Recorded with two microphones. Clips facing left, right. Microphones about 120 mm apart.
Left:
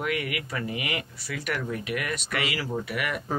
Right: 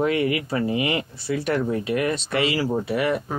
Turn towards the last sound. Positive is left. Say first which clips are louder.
# right 8 dB
turn(degrees=-30)  # may be behind; listen again after turning